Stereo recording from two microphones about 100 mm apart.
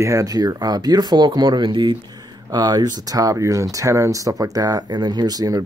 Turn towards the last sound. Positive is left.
turn(degrees=-40)  # may be behind; listen again after turning